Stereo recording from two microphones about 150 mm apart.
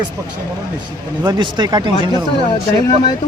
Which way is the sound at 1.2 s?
25° right (ahead or behind).